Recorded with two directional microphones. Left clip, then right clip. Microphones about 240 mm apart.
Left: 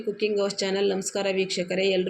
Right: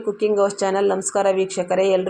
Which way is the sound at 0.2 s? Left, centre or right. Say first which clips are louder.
Right 7 dB; centre.